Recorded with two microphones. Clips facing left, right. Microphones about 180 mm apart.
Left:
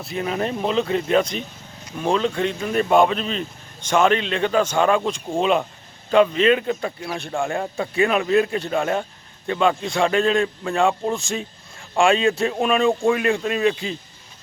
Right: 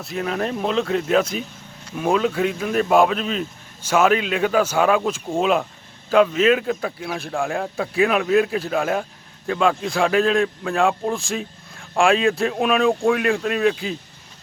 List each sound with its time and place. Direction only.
0.0 s speech: centre (ahead or behind)